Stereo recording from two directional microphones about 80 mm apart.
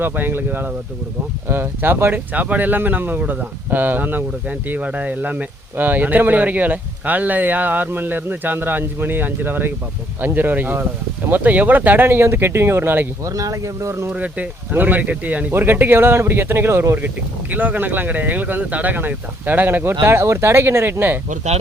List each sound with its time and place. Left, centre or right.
0.0 s speech: right
13.2 s speech: right
14.1 s speech: centre